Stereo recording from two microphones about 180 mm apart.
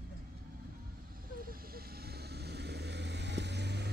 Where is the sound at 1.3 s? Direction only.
55° right (ahead or behind).